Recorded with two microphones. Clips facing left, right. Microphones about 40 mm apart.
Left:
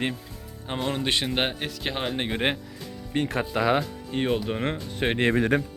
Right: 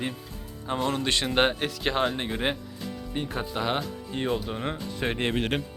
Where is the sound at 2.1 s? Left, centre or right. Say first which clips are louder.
Left 2 dB; left.